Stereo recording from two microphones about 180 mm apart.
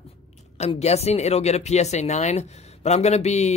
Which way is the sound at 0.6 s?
35° left (ahead or behind).